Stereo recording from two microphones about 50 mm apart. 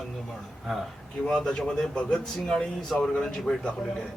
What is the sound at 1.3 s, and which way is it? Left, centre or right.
Speech, centre.